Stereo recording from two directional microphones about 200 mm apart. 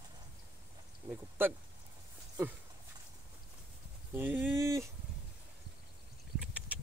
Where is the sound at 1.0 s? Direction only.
25° right (ahead or behind).